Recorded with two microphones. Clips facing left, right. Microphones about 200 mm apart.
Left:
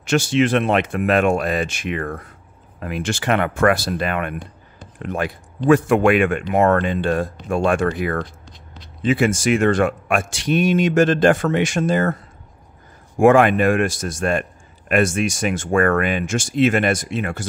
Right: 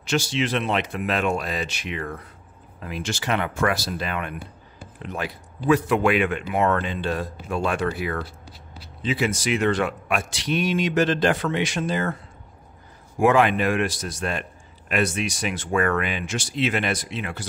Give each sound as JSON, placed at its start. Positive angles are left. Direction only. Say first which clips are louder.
{"t": 0.0, "sound": "speech", "louder": "left 7 dB", "side_deg": 50}
{"t": 8.2, "sound": "a sound", "louder": "left 5 dB", "side_deg": -5}
{"t": 9.0, "sound": "speech", "louder": "left 7 dB", "side_deg": 50}
{"t": 13.2, "sound": "speech", "louder": "left 6 dB", "side_deg": 50}